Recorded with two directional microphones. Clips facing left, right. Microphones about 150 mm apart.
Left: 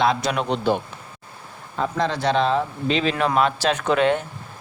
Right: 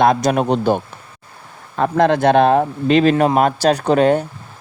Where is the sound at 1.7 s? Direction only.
60° right (ahead or behind).